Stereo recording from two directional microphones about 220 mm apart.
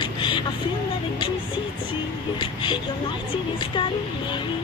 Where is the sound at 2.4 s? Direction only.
20° left (ahead or behind).